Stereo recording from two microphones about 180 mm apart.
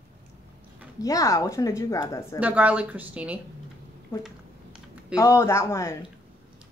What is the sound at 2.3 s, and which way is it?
Speech, 10° right (ahead or behind).